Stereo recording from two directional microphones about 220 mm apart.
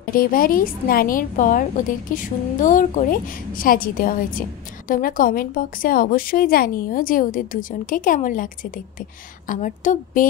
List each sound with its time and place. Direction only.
0.1 s a woman's voice: 40° left (ahead or behind)